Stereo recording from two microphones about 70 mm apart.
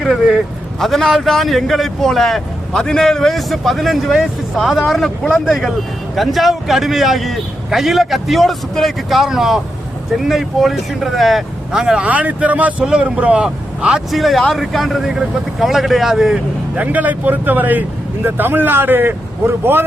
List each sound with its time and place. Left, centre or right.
0.0 s a man's voice: centre
12.0 s speech: right
14.1 s a man's voice: centre
16.7 s speech: right